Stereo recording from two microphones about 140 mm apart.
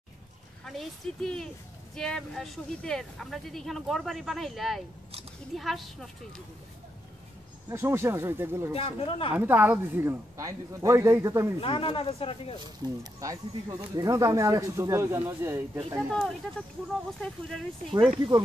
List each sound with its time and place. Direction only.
0.7 s speech: 5° left (ahead or behind)
7.7 s speech: 20° right (ahead or behind)
8.7 s speech: 40° left (ahead or behind)
9.3 s speech: 15° right (ahead or behind)
11.6 s speech: 40° left (ahead or behind)
12.8 s speech: 25° right (ahead or behind)
16.1 s speech: 5° left (ahead or behind)